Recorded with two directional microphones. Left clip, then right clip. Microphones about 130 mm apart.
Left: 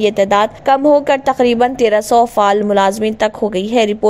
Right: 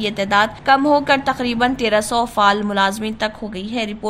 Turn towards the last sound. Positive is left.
turn(degrees=50)  # may be behind; listen again after turning